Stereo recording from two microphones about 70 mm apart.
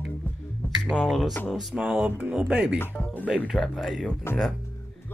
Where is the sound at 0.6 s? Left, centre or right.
Left.